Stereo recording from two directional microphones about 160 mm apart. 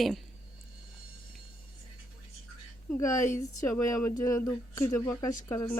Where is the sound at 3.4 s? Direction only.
20° left (ahead or behind).